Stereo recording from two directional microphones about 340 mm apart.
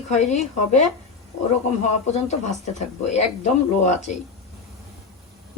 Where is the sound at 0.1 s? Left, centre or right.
Left.